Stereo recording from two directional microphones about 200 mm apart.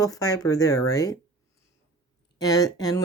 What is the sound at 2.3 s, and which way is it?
Speech, 20° left (ahead or behind).